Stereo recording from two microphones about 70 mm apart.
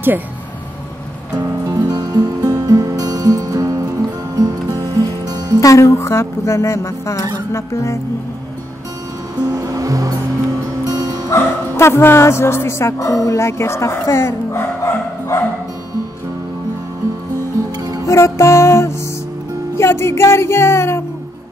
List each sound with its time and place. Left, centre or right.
1.9 s music: right
5.6 s speech: left
9.4 s music: right
11.2 s speech: left
18.0 s music: left